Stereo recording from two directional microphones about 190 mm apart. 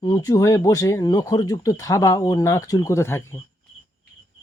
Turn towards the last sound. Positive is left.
turn(degrees=15)  # may be behind; listen again after turning